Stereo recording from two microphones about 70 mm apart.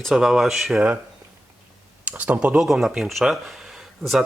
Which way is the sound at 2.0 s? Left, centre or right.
Right.